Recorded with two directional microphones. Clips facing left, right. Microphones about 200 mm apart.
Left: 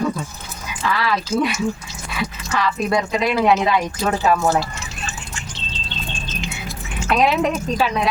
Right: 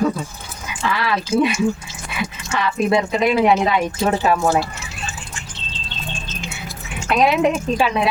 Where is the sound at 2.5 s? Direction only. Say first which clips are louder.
Right 3 dB; 25° right (ahead or behind).